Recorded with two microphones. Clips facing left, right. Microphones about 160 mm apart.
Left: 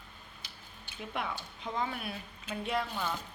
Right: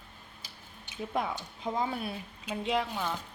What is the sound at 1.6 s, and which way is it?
Speech, 30° right (ahead or behind).